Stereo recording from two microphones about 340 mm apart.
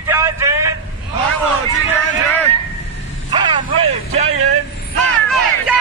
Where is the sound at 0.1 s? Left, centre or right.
Centre.